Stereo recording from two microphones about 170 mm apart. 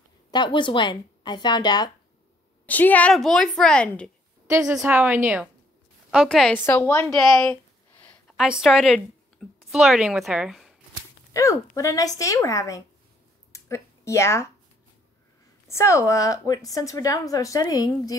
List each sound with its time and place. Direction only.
0.3 s a woman's voice: 25° left (ahead or behind)
2.6 s a woman's voice: 10° left (ahead or behind)
4.5 s a woman's voice: 15° right (ahead or behind)
6.0 s a woman's voice: centre (ahead or behind)
8.0 s a sound: 10° left (ahead or behind)
8.4 s speech: 5° right (ahead or behind)
11.3 s a woman's voice: 20° left (ahead or behind)
13.5 s a sound: 15° left (ahead or behind)
15.7 s a woman's voice: 15° left (ahead or behind)